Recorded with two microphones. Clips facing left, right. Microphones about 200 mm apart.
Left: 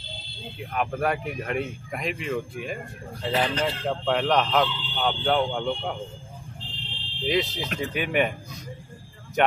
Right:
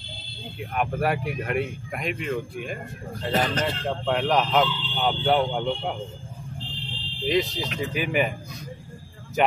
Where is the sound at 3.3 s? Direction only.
45° right (ahead or behind).